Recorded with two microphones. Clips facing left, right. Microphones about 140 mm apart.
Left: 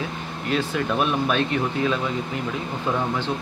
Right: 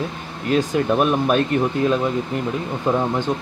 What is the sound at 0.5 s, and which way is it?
Speech, 45° right (ahead or behind).